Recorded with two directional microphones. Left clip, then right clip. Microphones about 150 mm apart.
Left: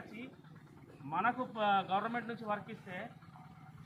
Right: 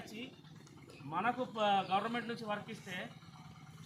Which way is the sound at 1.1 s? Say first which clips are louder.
Left 1 dB; 20° right (ahead or behind).